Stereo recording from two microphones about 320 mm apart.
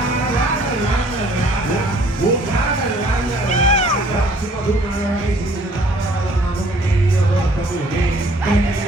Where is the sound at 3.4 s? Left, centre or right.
Left.